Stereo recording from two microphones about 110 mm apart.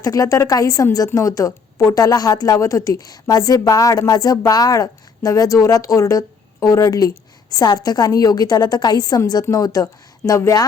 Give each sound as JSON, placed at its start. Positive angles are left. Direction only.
{"t": 0.0, "sound": "speech", "side_deg": 30}